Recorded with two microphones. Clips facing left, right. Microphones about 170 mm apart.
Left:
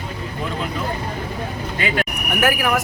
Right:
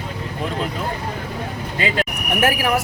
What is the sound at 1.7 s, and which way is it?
Speech, 30° right (ahead or behind).